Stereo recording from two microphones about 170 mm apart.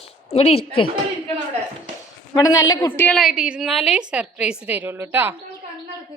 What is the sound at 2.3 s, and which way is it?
Speech, 20° left (ahead or behind).